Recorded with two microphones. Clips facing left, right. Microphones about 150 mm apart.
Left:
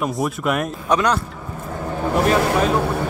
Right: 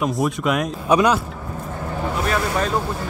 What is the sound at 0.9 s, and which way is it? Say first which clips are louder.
Speech: right 2 dB; 10° right (ahead or behind).